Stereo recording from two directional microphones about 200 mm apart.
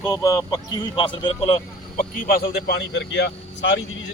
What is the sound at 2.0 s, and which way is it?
Speech, 45° left (ahead or behind).